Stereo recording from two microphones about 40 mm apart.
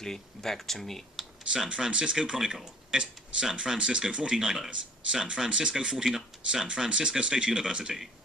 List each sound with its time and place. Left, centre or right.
0.0 s speech: centre
1.5 s speech: centre